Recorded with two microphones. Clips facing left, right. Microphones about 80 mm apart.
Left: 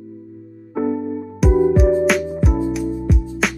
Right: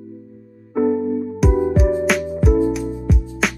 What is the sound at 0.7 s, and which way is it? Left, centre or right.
Music, centre.